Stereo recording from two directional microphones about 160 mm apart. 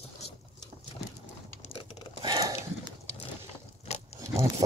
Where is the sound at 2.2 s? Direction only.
25° right (ahead or behind).